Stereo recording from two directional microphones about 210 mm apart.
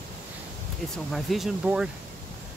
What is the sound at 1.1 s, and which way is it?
Speech, centre (ahead or behind).